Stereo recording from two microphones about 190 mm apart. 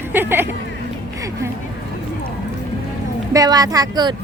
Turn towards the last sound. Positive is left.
turn(degrees=-20)  # may be behind; listen again after turning